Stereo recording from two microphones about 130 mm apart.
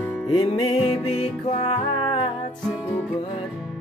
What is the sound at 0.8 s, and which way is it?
Music, 45° left (ahead or behind).